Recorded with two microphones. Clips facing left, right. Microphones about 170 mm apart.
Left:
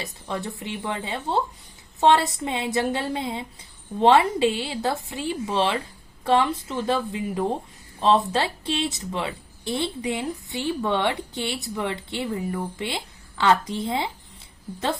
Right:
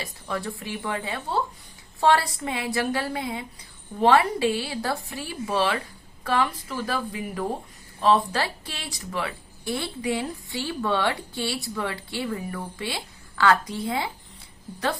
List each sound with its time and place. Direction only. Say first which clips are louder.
0.0 s a woman's voice: even; 20° left (ahead or behind)